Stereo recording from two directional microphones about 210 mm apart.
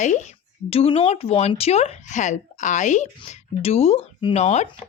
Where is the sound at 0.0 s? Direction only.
35° left (ahead or behind).